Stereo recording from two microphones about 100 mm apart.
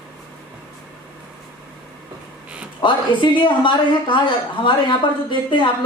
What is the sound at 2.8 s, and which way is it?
A woman's voice, 50° left (ahead or behind).